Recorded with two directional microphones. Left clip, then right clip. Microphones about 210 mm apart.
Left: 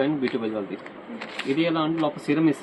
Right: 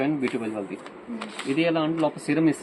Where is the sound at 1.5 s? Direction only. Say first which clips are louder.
Even; 15° right (ahead or behind).